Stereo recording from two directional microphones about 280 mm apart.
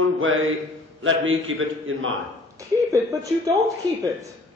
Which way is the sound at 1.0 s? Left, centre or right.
Right.